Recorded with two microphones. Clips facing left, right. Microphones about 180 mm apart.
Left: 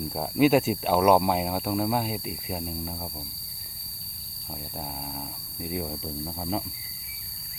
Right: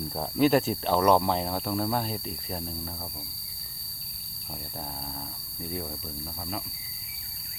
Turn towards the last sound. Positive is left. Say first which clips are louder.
# left 6 dB
turn(degrees=25)  # may be behind; listen again after turning